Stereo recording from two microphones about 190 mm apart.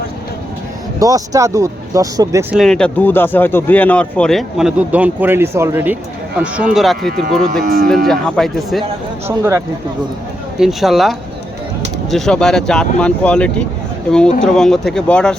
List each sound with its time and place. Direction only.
0.9 s speech: 20° right (ahead or behind)
2.6 s speech: 5° left (ahead or behind)
6.7 s speech: centre (ahead or behind)
7.6 s speech: 50° right (ahead or behind)
8.0 s speech: centre (ahead or behind)
9.2 s speech: 15° right (ahead or behind)
10.6 s speech: centre (ahead or behind)
12.1 s speech: centre (ahead or behind)